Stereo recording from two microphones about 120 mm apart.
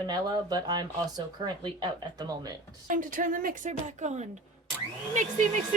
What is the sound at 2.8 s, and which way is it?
A woman's voice, 90° right.